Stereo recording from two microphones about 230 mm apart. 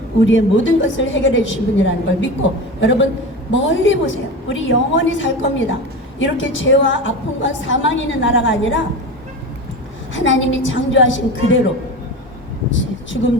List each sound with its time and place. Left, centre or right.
0.3 s a woman's voice: left
10.2 s a woman's voice: left